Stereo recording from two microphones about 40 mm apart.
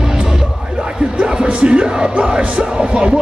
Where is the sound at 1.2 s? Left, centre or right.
Right.